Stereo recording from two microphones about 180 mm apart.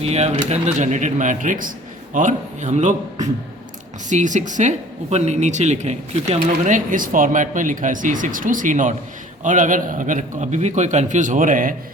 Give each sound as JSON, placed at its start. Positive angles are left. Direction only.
{"t": 0.0, "sound": "a woman's voice", "side_deg": -35}